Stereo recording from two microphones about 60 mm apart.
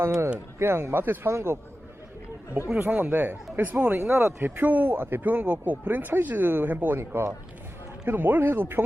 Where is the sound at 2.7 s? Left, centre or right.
Right.